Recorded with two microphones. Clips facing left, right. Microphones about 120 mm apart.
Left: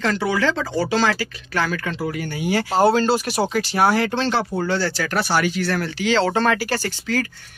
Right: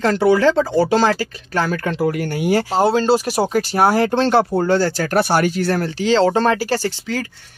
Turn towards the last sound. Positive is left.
turn(degrees=-25)  # may be behind; listen again after turning